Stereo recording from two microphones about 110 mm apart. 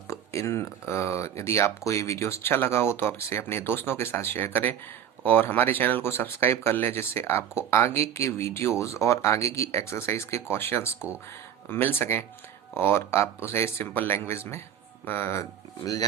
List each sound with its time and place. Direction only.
0.1 s speech: 25° left (ahead or behind)